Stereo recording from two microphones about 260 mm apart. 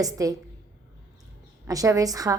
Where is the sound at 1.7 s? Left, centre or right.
Centre.